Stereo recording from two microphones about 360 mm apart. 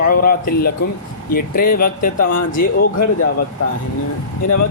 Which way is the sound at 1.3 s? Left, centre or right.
Left.